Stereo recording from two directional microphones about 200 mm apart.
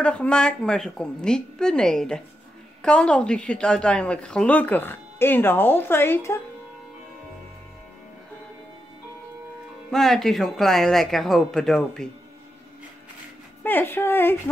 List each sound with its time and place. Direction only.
0.0 s a woman's voice: 5° left (ahead or behind)
9.8 s a woman's voice: centre (ahead or behind)
13.6 s a woman's voice: 10° left (ahead or behind)